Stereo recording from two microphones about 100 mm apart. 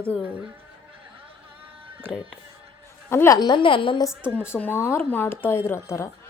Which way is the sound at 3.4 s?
50° left (ahead or behind).